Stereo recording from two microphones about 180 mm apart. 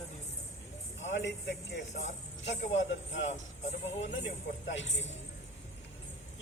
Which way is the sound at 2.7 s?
90° left.